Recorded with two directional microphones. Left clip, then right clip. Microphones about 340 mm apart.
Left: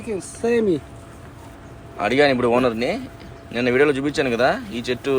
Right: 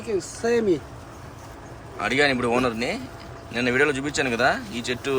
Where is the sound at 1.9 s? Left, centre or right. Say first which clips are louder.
Left 4 dB; centre.